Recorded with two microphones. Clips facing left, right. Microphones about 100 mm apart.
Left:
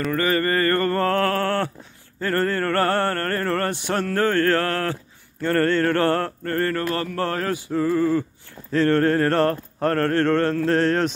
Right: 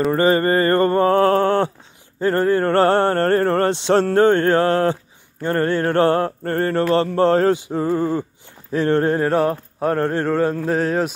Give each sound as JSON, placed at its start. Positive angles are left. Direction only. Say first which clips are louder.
{"t": 0.1, "sound": "speech", "louder": "right 3 dB", "side_deg": -25}
{"t": 5.4, "sound": "mantra", "louder": "even", "side_deg": -15}
{"t": 6.5, "sound": "speech", "louder": "right 6 dB", "side_deg": -25}
{"t": 8.7, "sound": "mantra", "louder": "right 1 dB", "side_deg": -20}